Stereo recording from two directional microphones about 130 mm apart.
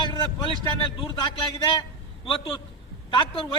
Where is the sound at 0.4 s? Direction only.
40° left (ahead or behind).